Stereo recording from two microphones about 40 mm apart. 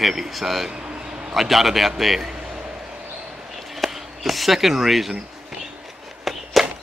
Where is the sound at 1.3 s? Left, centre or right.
Centre.